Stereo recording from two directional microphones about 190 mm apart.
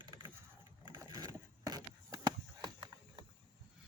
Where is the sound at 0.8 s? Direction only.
20° right (ahead or behind).